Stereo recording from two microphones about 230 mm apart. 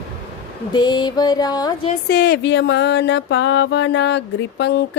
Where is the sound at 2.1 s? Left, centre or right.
Left.